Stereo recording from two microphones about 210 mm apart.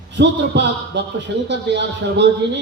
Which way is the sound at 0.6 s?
55° right (ahead or behind).